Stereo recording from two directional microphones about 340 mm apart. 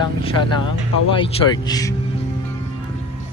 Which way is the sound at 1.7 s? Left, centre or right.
Centre.